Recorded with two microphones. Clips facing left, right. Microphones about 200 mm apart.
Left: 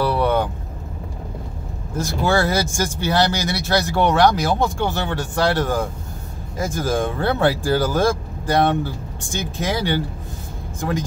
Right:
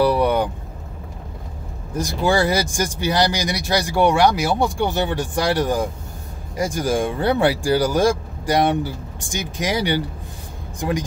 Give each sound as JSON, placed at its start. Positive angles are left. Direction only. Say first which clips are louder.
{"t": 0.0, "sound": "vehicle", "louder": "right 2 dB", "side_deg": -15}
{"t": 2.0, "sound": "speech", "louder": "right 1 dB", "side_deg": -15}